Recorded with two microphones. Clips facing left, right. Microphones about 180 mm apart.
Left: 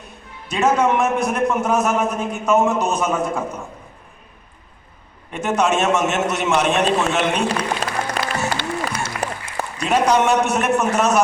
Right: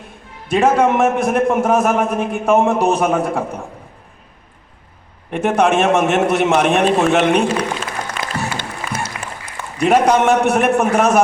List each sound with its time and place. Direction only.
0.5 s a man's voice: 50° right (ahead or behind)
3.3 s a man's voice: 35° right (ahead or behind)
5.3 s a man's voice: 55° right (ahead or behind)
7.4 s music: 40° left (ahead or behind)
9.0 s applause: 35° left (ahead or behind)
9.7 s a man's voice: 55° right (ahead or behind)